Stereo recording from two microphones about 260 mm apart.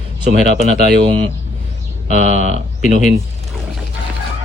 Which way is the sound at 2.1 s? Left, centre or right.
Right.